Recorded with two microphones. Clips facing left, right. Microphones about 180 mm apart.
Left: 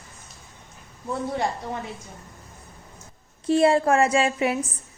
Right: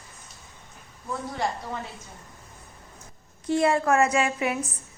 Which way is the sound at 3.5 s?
30° left (ahead or behind).